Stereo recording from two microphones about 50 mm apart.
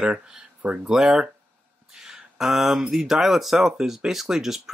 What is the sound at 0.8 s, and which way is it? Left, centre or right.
Speech, centre.